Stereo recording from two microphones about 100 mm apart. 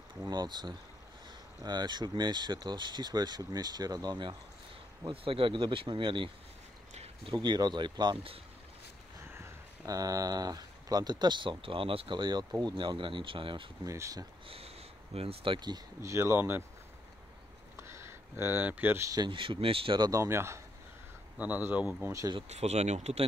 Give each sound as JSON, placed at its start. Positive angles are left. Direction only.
{"t": 0.3, "sound": "speech", "side_deg": -45}
{"t": 5.1, "sound": "speech", "side_deg": -65}
{"t": 6.9, "sound": "a sound", "side_deg": -90}
{"t": 7.3, "sound": "speech", "side_deg": -45}
{"t": 9.3, "sound": "speech", "side_deg": -30}
{"t": 13.8, "sound": "speech", "side_deg": -30}
{"t": 14.5, "sound": "speech", "side_deg": -80}
{"t": 16.0, "sound": "speech", "side_deg": -30}
{"t": 17.7, "sound": "a sound", "side_deg": -25}
{"t": 19.2, "sound": "speech", "side_deg": -55}
{"t": 20.0, "sound": "speech", "side_deg": -30}
{"t": 21.4, "sound": "speech", "side_deg": -15}
{"t": 22.5, "sound": "speech", "side_deg": -90}